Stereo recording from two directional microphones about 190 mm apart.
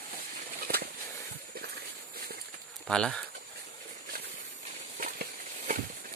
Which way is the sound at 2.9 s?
5° left (ahead or behind).